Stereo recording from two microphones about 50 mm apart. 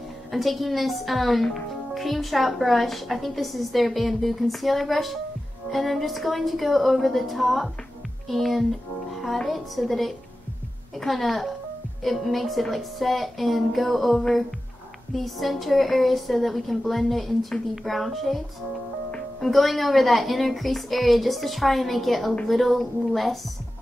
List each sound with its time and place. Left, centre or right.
0.3 s speech: centre
19.4 s speech: centre